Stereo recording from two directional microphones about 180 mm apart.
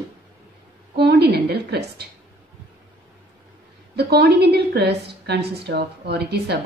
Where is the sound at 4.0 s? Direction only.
60° right (ahead or behind).